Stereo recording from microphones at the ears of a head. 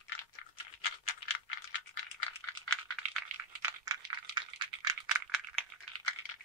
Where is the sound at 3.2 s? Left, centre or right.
Right.